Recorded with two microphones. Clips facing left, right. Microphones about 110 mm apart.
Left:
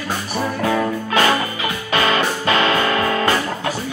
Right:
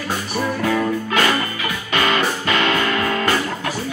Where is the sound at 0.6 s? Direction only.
35° left (ahead or behind).